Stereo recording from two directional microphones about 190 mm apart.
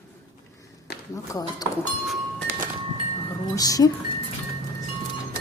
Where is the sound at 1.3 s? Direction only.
20° left (ahead or behind).